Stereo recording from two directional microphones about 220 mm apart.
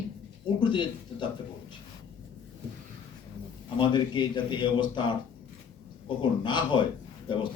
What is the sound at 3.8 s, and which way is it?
A man's voice, 20° left (ahead or behind).